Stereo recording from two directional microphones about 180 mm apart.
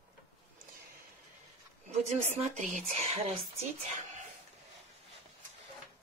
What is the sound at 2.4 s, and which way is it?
Speech, 40° right (ahead or behind).